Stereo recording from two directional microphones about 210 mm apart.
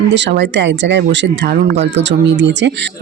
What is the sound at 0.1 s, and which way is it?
Speech, 55° right (ahead or behind).